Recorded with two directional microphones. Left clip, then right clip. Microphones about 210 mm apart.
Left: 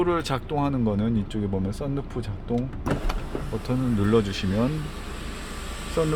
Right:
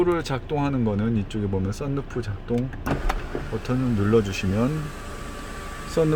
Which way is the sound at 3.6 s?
10° right (ahead or behind).